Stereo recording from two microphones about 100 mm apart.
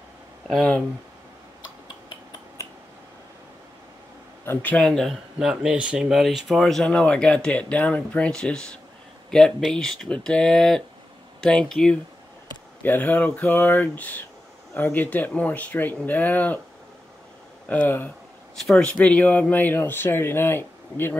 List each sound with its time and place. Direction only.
0.5 s speech: 10° left (ahead or behind)
2.6 s finger snapping: 30° left (ahead or behind)
4.5 s speech: 15° left (ahead or behind)
12.8 s speech: 20° left (ahead or behind)
17.6 s speech: 20° left (ahead or behind)
18.6 s speech: centre (ahead or behind)
18.9 s speech: 15° left (ahead or behind)